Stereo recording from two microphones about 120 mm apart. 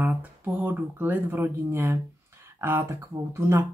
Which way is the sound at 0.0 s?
15° right (ahead or behind).